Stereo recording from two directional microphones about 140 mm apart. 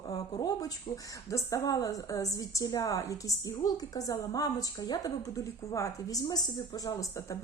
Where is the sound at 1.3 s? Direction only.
20° left (ahead or behind).